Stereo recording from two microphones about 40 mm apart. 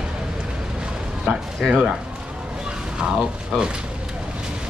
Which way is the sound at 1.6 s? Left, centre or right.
Right.